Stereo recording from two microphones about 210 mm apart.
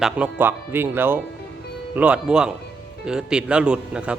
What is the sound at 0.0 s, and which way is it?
A man's voice, 5° right (ahead or behind).